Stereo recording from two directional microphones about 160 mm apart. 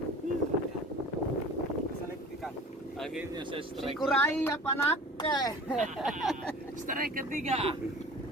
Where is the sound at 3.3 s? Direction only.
35° right (ahead or behind).